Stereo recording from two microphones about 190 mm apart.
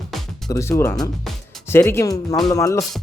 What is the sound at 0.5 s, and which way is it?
Speech, 15° left (ahead or behind).